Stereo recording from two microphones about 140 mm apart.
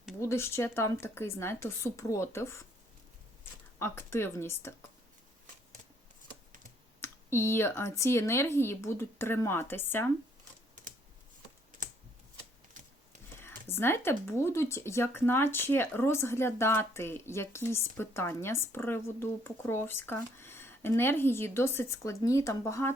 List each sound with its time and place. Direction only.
0.2 s speech: 20° left (ahead or behind)
3.8 s speech: 15° left (ahead or behind)
7.0 s speech: 15° left (ahead or behind)
13.4 s speech: 15° left (ahead or behind)